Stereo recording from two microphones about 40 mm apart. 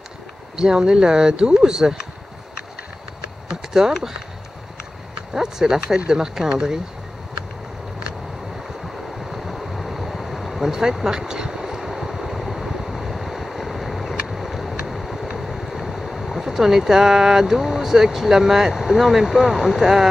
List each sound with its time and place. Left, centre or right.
0.6 s speech: centre
3.4 s a sound: centre
5.3 s speech: centre
9.3 s vehicle: centre
14.9 s a sound: centre
15.2 s vehicle: centre
15.6 s speech: centre